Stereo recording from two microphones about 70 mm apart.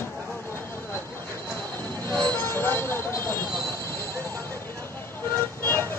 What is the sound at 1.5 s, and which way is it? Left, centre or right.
Train, left.